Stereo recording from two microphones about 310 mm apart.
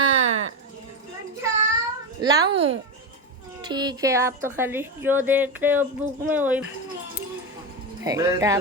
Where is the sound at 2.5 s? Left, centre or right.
Centre.